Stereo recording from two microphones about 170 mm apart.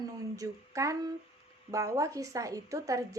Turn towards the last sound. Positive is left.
turn(degrees=-20)  # may be behind; listen again after turning